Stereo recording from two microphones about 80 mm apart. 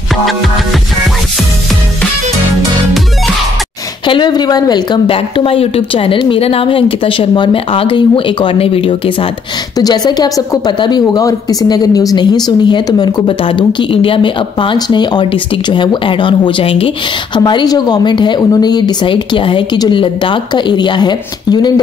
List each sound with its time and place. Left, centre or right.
4.1 s a woman's voice: left
9.8 s a woman's voice: left
10.8 s speech: left
12.2 s a woman's voice: left
17.6 s speech: left
18.5 s a woman's voice: left